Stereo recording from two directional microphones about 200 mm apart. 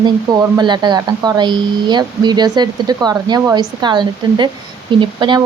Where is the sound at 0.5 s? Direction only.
20° right (ahead or behind).